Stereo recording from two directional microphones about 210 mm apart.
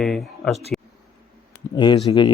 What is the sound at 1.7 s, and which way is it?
Speech, 20° left (ahead or behind).